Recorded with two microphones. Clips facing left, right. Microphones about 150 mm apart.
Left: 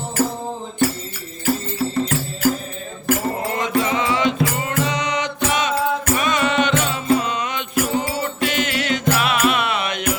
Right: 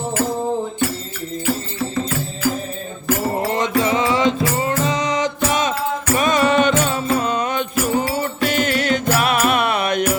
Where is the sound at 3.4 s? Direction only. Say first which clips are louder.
Right 2 dB; 30° right (ahead or behind).